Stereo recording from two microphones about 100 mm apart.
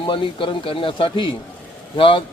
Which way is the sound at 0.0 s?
55° left (ahead or behind).